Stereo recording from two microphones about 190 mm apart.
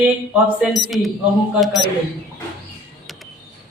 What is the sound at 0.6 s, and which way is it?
Speech, centre (ahead or behind).